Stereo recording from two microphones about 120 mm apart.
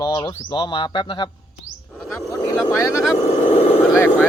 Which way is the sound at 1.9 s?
Centre (ahead or behind).